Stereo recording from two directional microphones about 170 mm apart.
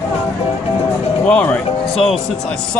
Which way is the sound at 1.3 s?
10° left (ahead or behind).